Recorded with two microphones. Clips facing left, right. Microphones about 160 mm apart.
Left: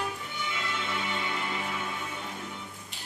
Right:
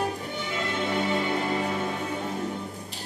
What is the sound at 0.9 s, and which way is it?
Music, 40° right (ahead or behind).